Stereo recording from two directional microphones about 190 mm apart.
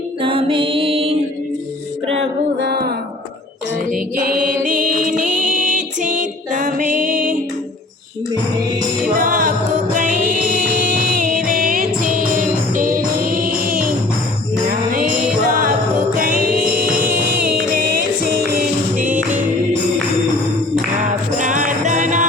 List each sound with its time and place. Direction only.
0.2 s music: 30° right (ahead or behind)
2.6 s music: 55° right (ahead or behind)
3.9 s music: 45° right (ahead or behind)
9.1 s music: 45° right (ahead or behind)
15.4 s music: 45° right (ahead or behind)
17.0 s music: 10° right (ahead or behind)
17.7 s music: 45° right (ahead or behind)
21.1 s music: 40° right (ahead or behind)